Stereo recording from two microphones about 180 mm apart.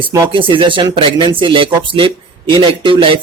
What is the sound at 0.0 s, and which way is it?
Speech, 15° right (ahead or behind).